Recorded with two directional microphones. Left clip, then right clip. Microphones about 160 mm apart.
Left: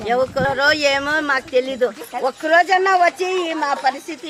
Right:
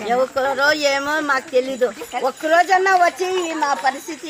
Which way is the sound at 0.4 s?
30° left (ahead or behind).